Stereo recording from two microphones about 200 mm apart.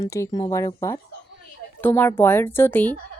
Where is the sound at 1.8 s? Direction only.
10° left (ahead or behind).